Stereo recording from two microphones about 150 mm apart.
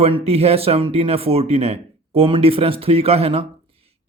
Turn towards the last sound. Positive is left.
turn(degrees=-40)  # may be behind; listen again after turning